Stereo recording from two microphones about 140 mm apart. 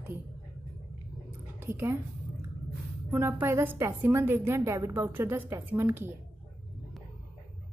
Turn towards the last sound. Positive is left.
turn(degrees=-15)  # may be behind; listen again after turning